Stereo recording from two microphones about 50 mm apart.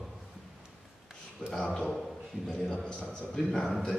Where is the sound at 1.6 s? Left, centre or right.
Left.